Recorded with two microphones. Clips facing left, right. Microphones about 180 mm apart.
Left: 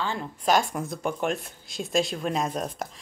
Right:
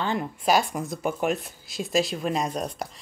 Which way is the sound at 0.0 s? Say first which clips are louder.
Right 3 dB; 20° right (ahead or behind).